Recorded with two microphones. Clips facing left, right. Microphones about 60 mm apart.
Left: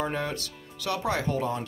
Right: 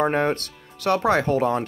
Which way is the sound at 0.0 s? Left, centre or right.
Right.